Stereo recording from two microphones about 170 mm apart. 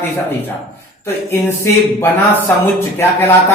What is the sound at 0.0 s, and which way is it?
Speech, 10° left (ahead or behind).